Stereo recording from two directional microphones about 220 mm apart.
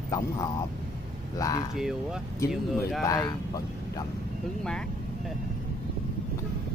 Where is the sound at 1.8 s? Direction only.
Centre (ahead or behind).